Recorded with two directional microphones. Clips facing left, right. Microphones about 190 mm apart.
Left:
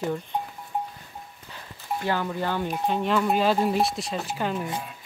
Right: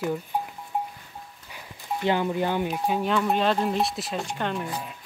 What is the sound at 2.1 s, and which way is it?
Speech, 20° right (ahead or behind).